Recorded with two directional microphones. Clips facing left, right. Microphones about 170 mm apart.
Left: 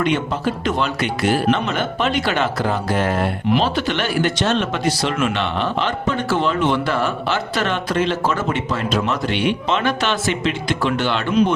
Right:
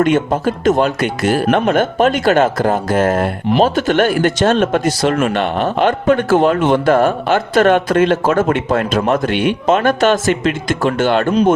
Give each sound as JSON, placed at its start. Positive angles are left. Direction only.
{"t": 0.0, "sound": "speech", "side_deg": -45}